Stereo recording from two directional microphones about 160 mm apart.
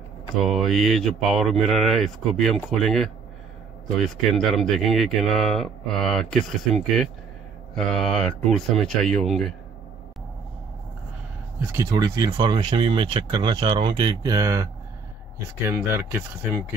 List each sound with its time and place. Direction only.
0.4 s speech: centre (ahead or behind)
11.6 s speech: 20° right (ahead or behind)